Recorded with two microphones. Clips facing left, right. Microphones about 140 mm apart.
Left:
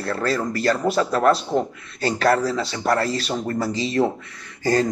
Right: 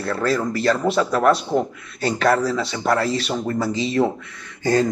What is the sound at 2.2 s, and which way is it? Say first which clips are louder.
Speech: right 1 dB; 30° left (ahead or behind).